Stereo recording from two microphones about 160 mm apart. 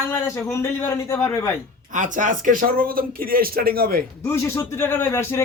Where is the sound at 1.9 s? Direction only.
50° right (ahead or behind); by 4.0 s 70° right (ahead or behind).